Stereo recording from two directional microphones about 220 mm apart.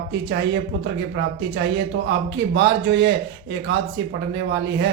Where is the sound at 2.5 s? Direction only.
50° right (ahead or behind).